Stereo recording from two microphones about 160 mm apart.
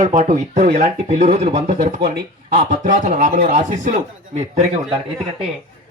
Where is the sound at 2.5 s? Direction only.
50° right (ahead or behind).